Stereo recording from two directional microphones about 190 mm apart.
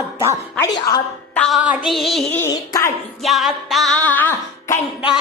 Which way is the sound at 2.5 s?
20° left (ahead or behind).